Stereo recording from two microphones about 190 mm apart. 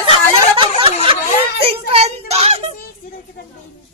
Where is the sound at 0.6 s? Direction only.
30° right (ahead or behind).